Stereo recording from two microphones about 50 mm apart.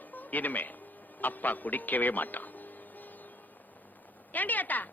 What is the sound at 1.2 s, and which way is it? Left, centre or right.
Speech, left.